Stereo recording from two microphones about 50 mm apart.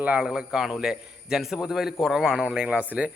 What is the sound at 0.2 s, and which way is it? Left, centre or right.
A man's voice, centre.